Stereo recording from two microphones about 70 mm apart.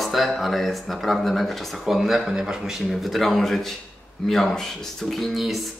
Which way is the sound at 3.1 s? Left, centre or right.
Centre.